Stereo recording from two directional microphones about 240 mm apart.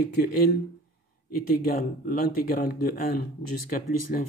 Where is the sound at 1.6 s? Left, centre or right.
Left.